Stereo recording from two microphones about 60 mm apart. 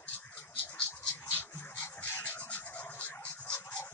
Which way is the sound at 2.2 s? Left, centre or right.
Left.